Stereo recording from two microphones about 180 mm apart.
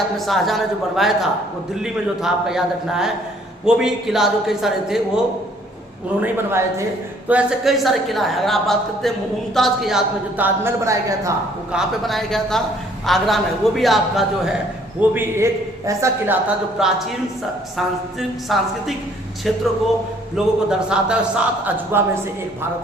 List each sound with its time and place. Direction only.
0.3 s a woman's voice: centre (ahead or behind); by 11.3 s 15° right (ahead or behind)
11.7 s a woman's voice: centre (ahead or behind)
15.1 s a woman's voice: 10° right (ahead or behind)
16.8 s a woman's voice: 5° right (ahead or behind)
18.4 s a woman's voice: centre (ahead or behind)